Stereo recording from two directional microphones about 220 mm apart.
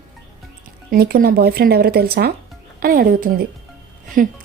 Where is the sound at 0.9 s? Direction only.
45° right (ahead or behind).